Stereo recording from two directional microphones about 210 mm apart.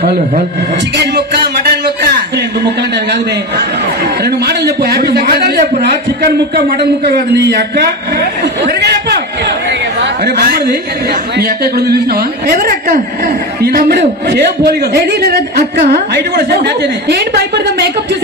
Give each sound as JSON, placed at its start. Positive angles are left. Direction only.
{"t": 4.2, "sound": "speech", "side_deg": -50}
{"t": 7.3, "sound": "speech", "side_deg": -55}
{"t": 9.7, "sound": "speech", "side_deg": -50}